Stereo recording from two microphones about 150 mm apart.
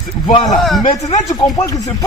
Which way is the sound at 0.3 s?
35° left (ahead or behind).